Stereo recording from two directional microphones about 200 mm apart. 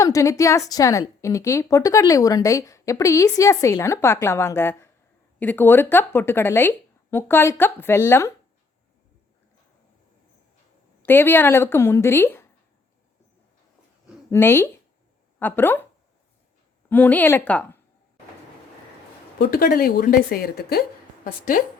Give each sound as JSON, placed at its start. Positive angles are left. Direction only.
{"t": 0.0, "sound": "a woman's voice", "side_deg": 15}
{"t": 11.0, "sound": "speech", "side_deg": 10}
{"t": 14.3, "sound": "speech", "side_deg": 10}
{"t": 16.9, "sound": "speech", "side_deg": 10}
{"t": 19.4, "sound": "a woman's voice", "side_deg": 50}